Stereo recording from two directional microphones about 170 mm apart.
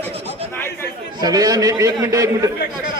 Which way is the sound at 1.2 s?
20° right (ahead or behind).